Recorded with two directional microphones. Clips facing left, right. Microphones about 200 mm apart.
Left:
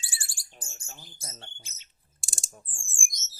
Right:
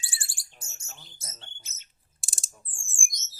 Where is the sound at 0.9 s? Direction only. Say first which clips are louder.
Left 2 dB; 30° left (ahead or behind).